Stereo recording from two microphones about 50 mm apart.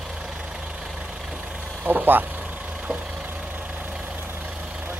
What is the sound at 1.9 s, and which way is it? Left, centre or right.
Vehicle, right.